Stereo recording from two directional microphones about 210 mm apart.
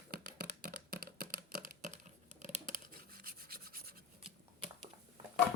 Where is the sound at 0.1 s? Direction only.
50° right (ahead or behind).